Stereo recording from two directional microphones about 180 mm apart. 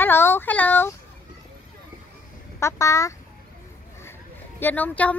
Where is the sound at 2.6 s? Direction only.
15° left (ahead or behind).